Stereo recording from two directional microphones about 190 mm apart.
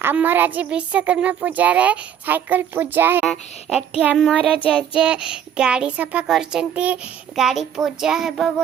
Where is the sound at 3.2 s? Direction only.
Centre (ahead or behind).